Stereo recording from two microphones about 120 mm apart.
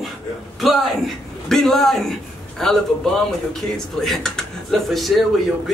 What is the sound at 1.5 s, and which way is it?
Speech, 5° left (ahead or behind).